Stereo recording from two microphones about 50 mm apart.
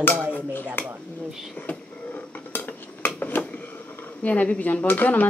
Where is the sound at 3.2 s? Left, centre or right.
Left.